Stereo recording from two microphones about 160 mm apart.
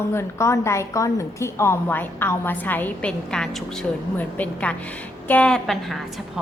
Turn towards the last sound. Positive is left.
turn(degrees=0)  # may be behind; listen again after turning